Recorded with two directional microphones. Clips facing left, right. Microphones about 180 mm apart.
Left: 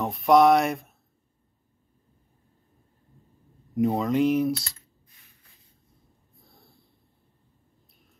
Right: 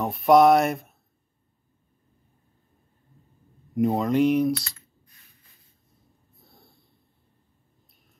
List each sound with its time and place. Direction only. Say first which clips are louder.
0.0 s speech: right 2 dB; centre (ahead or behind)
3.7 s speech: right 1 dB; centre (ahead or behind)
6.4 s snort: right 2 dB; centre (ahead or behind)